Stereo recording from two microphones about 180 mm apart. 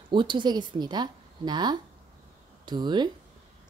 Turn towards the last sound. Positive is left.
turn(degrees=-25)  # may be behind; listen again after turning